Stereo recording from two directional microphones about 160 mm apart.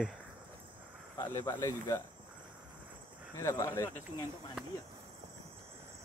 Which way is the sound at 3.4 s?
20° left (ahead or behind).